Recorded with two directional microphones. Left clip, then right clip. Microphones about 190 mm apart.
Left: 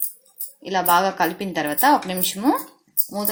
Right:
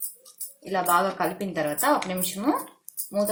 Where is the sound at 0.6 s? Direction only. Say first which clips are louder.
Left 4 dB; 35° left (ahead or behind).